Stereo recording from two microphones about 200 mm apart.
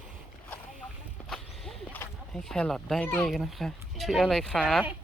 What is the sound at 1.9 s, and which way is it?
Speech, 5° left (ahead or behind).